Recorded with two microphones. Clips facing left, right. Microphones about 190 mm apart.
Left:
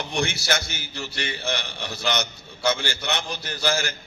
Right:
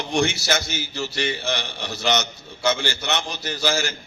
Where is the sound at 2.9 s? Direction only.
55° left (ahead or behind).